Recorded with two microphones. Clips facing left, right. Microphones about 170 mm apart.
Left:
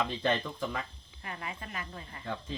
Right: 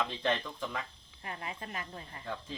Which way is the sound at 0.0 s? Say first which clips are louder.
Left 2 dB; 5° left (ahead or behind).